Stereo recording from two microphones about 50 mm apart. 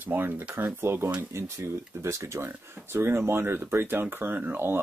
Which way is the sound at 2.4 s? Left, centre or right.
Right.